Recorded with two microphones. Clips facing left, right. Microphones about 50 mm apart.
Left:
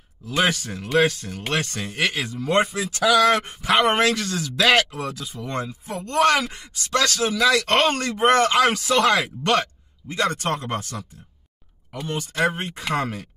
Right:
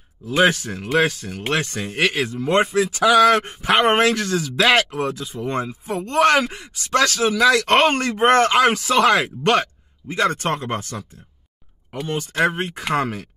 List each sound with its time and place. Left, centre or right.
0.3 s speech: right
4.9 s speech: right